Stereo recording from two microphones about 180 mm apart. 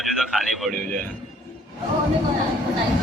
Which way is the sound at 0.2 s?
Centre (ahead or behind).